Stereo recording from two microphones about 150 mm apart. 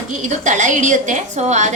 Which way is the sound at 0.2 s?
55° right (ahead or behind).